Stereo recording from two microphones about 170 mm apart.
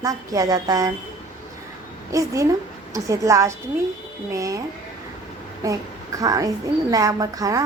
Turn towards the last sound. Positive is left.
turn(degrees=-20)  # may be behind; listen again after turning